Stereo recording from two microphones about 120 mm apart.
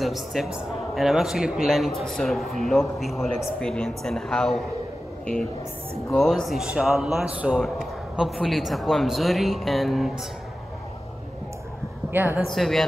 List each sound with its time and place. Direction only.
0.0 s a man's voice: centre (ahead or behind)
12.1 s speech: 15° right (ahead or behind)
12.4 s a man's voice: centre (ahead or behind)